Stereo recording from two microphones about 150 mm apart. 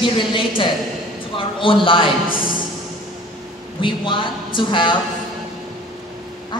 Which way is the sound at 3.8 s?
35° left (ahead or behind).